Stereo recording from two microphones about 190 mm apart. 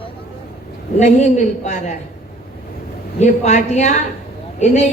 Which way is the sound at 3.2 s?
35° left (ahead or behind).